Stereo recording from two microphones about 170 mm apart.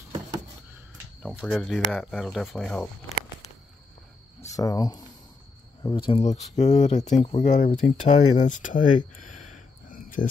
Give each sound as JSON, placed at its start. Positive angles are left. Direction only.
{"t": 1.2, "sound": "speech", "side_deg": 5}
{"t": 4.4, "sound": "speech", "side_deg": 20}
{"t": 6.2, "sound": "speech", "side_deg": 45}
{"t": 9.8, "sound": "cricket", "side_deg": 55}